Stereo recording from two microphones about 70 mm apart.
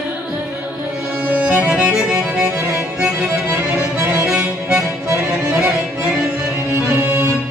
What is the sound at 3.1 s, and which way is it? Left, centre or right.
Music, right.